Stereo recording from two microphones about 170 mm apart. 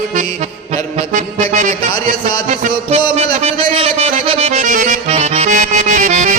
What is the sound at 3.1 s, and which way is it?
Music, 35° right (ahead or behind).